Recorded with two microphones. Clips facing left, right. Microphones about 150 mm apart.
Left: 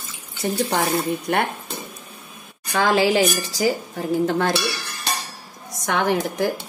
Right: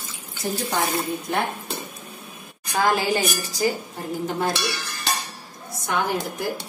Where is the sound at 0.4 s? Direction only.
75° left (ahead or behind).